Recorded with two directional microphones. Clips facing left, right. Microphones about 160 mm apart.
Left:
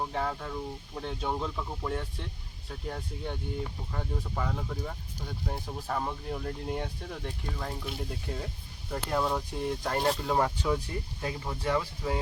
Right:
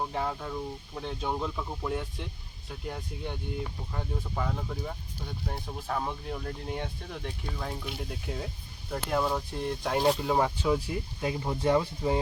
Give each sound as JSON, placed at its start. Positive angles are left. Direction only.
{"t": 0.0, "sound": "speech", "side_deg": -5}
{"t": 11.3, "sound": "speech", "side_deg": -25}